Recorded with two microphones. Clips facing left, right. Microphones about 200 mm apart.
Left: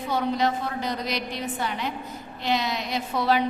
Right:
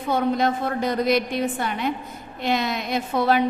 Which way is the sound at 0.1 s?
50° right (ahead or behind).